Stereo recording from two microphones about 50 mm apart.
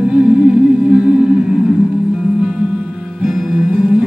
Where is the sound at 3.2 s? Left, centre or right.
Centre.